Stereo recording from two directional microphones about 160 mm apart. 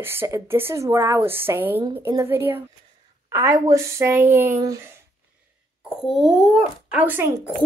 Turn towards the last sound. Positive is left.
turn(degrees=-10)  # may be behind; listen again after turning